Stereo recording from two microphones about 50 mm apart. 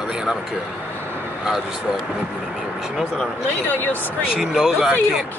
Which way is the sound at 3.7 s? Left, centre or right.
Left.